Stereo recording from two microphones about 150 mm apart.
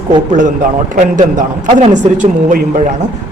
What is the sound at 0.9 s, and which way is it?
A man's voice, 55° right (ahead or behind).